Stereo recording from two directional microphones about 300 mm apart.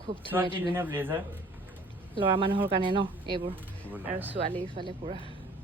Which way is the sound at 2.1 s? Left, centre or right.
Centre.